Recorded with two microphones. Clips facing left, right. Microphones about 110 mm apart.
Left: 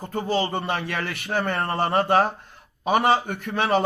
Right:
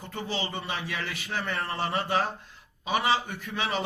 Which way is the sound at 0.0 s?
45° left (ahead or behind).